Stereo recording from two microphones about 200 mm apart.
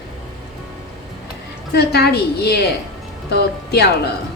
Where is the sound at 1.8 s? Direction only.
55° left (ahead or behind).